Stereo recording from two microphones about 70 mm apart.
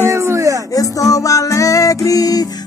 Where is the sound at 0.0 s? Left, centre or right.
Right.